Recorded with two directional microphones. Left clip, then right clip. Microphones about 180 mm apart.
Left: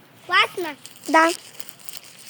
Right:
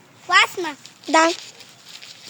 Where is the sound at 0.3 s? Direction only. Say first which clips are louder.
Right 3 dB; 90° right.